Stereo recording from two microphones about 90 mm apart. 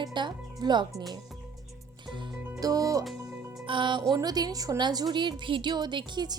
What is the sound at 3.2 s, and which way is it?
Music, 30° right (ahead or behind).